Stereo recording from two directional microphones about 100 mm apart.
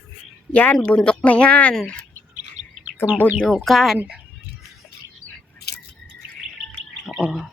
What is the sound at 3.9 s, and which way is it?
Speech, 10° right (ahead or behind).